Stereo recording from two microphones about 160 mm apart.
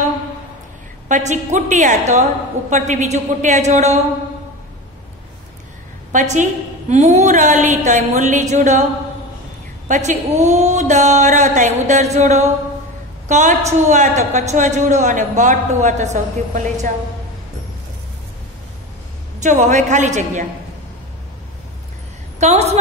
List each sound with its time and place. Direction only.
1.0 s a woman's voice: 50° right (ahead or behind)
6.1 s a woman's voice: 50° right (ahead or behind)
9.8 s a woman's voice: 50° right (ahead or behind)
19.4 s a woman's voice: 50° right (ahead or behind)
22.4 s a woman's voice: 45° right (ahead or behind)